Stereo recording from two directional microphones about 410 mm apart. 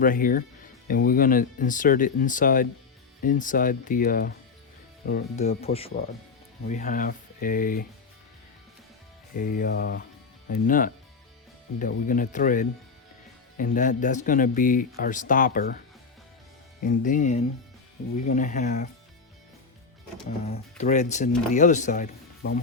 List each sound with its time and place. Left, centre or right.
0.0 s speech: centre
9.3 s speech: centre
16.8 s speech: centre
20.4 s speech: centre